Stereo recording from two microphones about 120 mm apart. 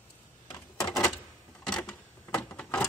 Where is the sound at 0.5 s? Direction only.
30° left (ahead or behind).